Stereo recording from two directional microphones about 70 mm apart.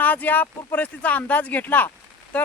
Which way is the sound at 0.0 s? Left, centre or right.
Left.